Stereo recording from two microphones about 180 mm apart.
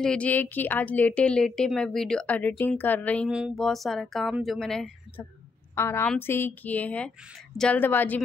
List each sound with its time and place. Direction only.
0.0 s a woman's voice: 5° left (ahead or behind)
3.3 s speech: 5° right (ahead or behind)
5.8 s a woman's voice: 15° left (ahead or behind)